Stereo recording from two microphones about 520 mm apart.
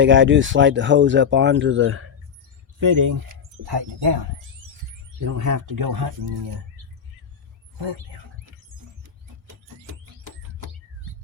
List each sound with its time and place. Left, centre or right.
0.0 s speech: right
2.8 s speech: right
3.7 s speech: right
5.2 s speech: right